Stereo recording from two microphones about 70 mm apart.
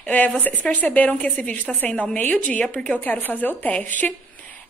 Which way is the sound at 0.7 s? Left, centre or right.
Left.